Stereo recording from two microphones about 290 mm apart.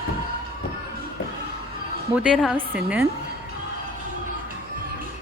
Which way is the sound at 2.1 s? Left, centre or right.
Centre.